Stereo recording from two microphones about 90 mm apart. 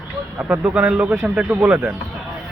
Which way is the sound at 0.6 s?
10° right (ahead or behind).